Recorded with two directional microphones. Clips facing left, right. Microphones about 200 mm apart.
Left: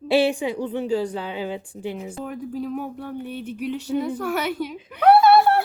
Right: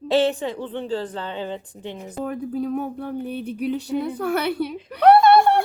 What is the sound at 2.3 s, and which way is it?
Speech, 40° right (ahead or behind).